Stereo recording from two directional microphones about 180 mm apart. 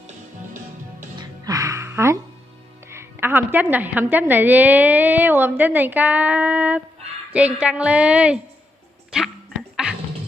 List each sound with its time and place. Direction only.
1.1 s music: 20° right (ahead or behind)
2.9 s a woman's voice: 15° right (ahead or behind)
9.1 s music: centre (ahead or behind)